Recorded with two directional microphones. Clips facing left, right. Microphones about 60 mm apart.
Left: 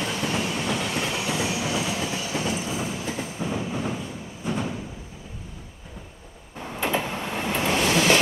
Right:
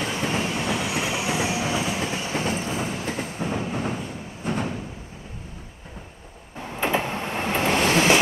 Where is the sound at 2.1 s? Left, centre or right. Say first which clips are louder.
Right 1 dB; right.